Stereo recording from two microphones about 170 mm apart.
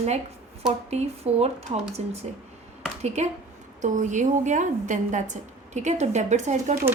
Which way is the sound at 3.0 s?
40° right (ahead or behind).